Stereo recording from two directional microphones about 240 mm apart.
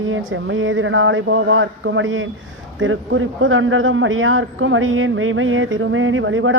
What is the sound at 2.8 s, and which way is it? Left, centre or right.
A man's voice, right.